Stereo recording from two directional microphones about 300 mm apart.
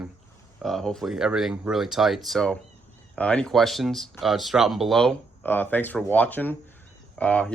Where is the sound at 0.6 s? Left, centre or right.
Centre.